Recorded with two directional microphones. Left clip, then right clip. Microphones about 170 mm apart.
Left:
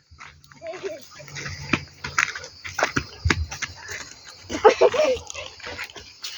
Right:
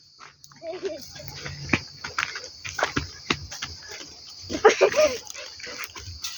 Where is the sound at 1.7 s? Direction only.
50° left (ahead or behind).